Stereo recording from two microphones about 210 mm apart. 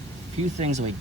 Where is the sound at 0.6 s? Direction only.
35° right (ahead or behind).